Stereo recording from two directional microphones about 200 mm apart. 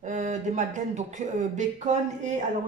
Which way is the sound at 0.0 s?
35° right (ahead or behind).